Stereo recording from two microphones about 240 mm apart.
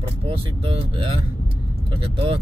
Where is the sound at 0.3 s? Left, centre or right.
Right.